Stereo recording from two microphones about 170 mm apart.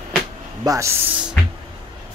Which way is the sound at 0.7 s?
15° right (ahead or behind).